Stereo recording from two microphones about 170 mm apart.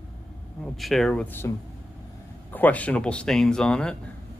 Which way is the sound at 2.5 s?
10° left (ahead or behind).